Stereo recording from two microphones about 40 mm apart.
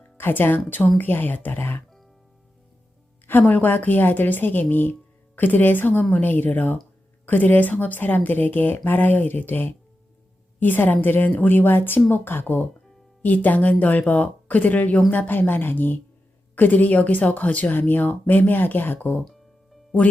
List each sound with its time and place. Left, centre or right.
0.2 s a woman's voice: left
3.2 s a woman's voice: left
13.2 s speech: left
15.3 s a woman's voice: left
19.2 s music: centre